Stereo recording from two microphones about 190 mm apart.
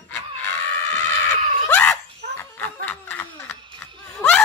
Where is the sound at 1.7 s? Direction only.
10° left (ahead or behind).